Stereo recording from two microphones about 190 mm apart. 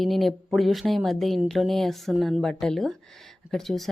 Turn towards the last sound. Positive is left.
turn(degrees=0)  # may be behind; listen again after turning